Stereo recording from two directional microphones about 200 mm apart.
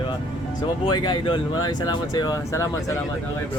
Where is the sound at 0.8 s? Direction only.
20° left (ahead or behind).